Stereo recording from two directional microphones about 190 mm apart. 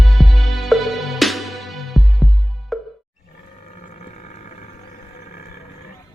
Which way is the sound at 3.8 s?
40° left (ahead or behind).